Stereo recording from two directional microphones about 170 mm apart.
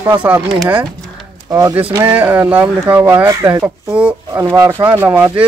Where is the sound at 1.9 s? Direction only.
10° right (ahead or behind).